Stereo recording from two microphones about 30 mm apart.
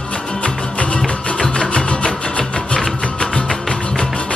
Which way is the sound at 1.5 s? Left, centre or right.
Left.